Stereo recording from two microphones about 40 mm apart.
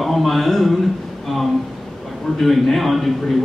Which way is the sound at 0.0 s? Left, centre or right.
Centre.